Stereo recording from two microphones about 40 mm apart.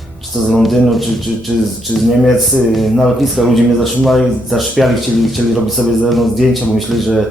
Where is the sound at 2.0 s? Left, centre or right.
Centre.